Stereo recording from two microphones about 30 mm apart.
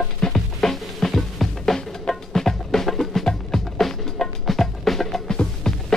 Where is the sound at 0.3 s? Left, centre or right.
Centre.